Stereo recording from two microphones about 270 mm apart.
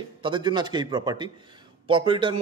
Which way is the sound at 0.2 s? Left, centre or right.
Centre.